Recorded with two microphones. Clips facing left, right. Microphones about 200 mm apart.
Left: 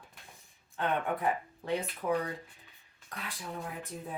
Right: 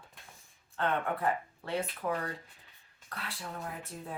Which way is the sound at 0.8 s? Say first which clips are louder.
Even; 15° left (ahead or behind).